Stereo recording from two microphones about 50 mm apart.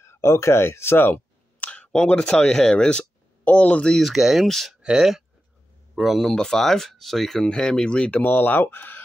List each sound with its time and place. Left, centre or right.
0.0 s speech: left
1.6 s speech: left
4.0 s speech: centre
4.5 s speech: centre
5.9 s speech: centre
6.3 s speech: centre
8.2 s speech: left